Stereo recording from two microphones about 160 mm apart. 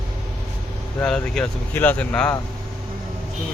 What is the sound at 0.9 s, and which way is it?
Speech, 5° left (ahead or behind).